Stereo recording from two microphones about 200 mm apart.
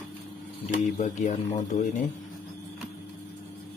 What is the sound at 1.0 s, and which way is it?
Speech, 35° left (ahead or behind).